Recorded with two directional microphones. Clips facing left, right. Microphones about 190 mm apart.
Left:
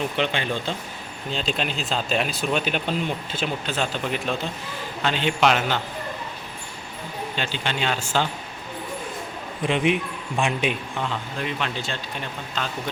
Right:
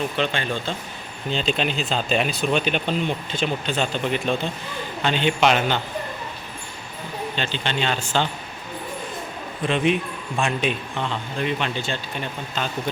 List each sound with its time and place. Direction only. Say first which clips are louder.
0.2 s speech: even; 15° left (ahead or behind)
1.3 s a man's voice: right 3 dB; centre (ahead or behind)
7.3 s speech: right 1 dB; 10° left (ahead or behind)
9.6 s a man's voice: right 1 dB; 15° left (ahead or behind)